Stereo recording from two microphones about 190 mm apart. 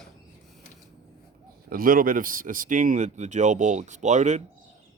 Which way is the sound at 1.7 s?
50° right (ahead or behind).